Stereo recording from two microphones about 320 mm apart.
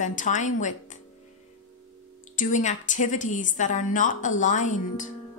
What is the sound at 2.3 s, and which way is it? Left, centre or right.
A woman's voice, left.